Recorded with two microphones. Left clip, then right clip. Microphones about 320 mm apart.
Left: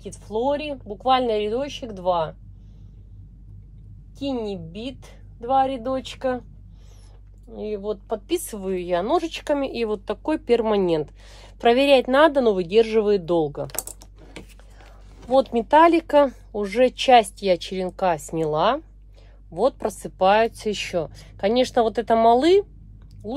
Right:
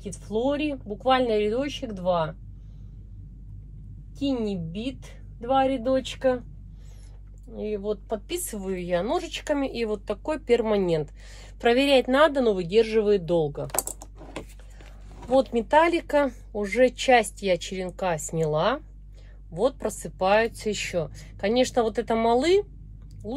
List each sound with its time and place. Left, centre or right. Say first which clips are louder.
0.0 s speech: left 2 dB; centre
4.2 s speech: left 1 dB; centre
7.5 s speech: left 1 dB; left
13.9 s typing: right 4 dB; centre
15.3 s speech: left 4 dB; left